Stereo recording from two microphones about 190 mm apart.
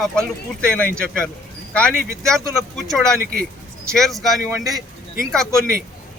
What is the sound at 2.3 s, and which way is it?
Speech, centre (ahead or behind).